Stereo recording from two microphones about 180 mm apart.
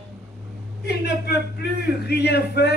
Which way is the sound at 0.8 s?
65° left (ahead or behind).